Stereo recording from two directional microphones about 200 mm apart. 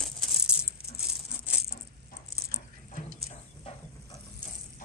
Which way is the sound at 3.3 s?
30° left (ahead or behind).